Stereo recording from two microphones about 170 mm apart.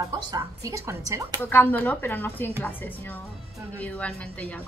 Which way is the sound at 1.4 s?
10° left (ahead or behind).